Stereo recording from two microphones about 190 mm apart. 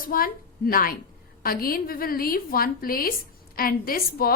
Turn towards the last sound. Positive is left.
turn(degrees=50)  # may be behind; listen again after turning